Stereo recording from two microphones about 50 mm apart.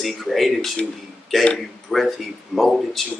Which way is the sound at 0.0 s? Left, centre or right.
Centre.